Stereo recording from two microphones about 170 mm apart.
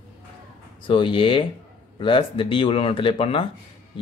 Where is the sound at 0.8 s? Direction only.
30° left (ahead or behind).